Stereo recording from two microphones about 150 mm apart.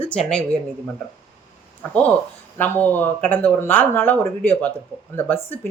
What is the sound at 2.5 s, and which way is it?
Speech, 10° left (ahead or behind).